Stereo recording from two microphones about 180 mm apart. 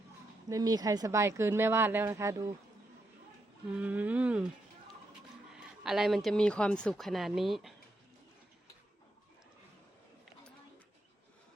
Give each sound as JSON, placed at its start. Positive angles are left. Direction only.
{"t": 0.4, "sound": "speech", "side_deg": -20}
{"t": 3.8, "sound": "speech", "side_deg": -10}
{"t": 5.5, "sound": "speech", "side_deg": -5}